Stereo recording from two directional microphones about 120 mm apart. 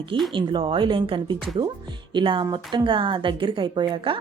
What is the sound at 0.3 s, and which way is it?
A woman's voice, 45° right (ahead or behind).